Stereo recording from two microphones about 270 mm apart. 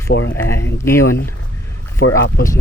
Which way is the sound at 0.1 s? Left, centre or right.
Left.